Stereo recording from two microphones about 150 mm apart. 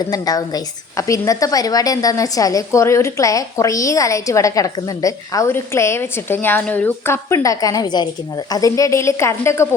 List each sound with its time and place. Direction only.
0.1 s a woman's voice: 25° left (ahead or behind)